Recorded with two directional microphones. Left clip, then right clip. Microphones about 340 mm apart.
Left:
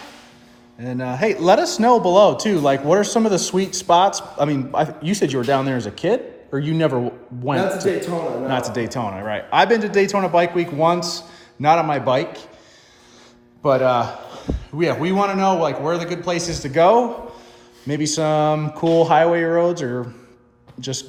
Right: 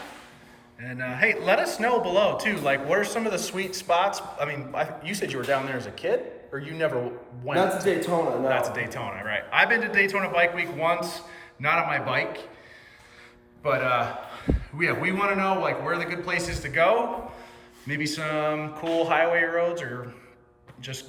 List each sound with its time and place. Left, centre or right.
0.8 s speech: centre
13.7 s a man's voice: centre